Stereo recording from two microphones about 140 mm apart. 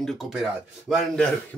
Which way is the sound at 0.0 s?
Centre (ahead or behind).